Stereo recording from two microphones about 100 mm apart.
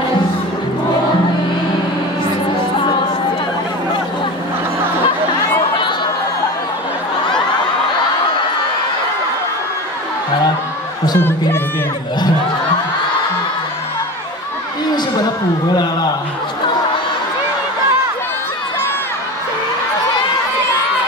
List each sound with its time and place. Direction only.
11.1 s speech: 20° left (ahead or behind)
15.7 s a man's voice: 45° left (ahead or behind)